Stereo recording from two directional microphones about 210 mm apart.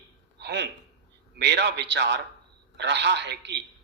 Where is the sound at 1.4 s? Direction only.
55° right (ahead or behind).